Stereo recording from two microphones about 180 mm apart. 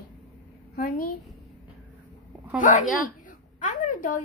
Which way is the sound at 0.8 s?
55° left (ahead or behind).